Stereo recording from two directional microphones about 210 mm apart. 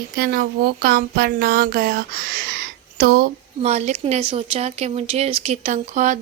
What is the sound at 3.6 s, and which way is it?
Speech, 35° right (ahead or behind).